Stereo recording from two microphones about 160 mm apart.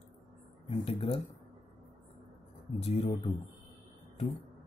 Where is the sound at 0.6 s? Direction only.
35° left (ahead or behind).